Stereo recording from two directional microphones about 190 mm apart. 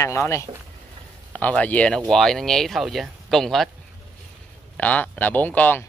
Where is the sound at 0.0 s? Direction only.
15° left (ahead or behind).